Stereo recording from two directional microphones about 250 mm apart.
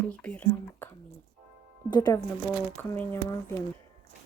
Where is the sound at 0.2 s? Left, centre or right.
Centre.